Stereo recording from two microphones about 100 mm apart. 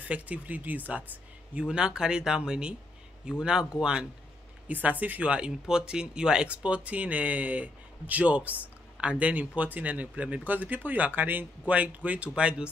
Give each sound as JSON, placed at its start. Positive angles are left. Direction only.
{"t": 0.1, "sound": "speech", "side_deg": -15}